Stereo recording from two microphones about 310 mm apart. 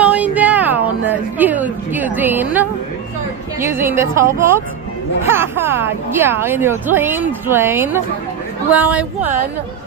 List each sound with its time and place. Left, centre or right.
0.0 s music: centre
3.6 s a woman's voice: centre